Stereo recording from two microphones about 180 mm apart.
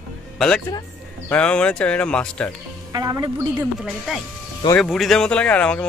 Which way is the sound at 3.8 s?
Centre (ahead or behind).